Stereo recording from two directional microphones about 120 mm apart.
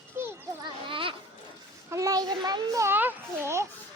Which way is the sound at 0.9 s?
45° right (ahead or behind).